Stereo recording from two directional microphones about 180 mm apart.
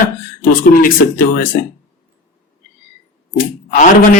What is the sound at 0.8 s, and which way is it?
Speech, 50° left (ahead or behind).